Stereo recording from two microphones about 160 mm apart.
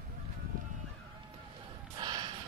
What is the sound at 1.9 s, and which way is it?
Gasp, 25° right (ahead or behind).